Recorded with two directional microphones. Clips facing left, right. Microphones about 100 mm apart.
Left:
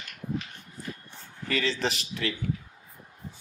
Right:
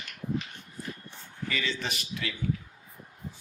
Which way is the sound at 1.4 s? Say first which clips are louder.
Left 5 dB; 35° left (ahead or behind).